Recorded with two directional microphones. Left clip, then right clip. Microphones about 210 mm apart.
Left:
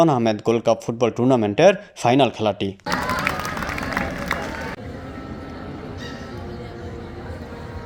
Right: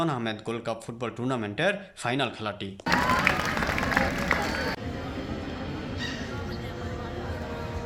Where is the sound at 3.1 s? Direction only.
40° left (ahead or behind).